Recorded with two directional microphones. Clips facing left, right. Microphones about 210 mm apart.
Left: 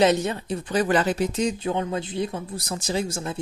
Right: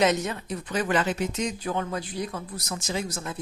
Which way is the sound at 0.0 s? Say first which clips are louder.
Left 4 dB; 30° left (ahead or behind).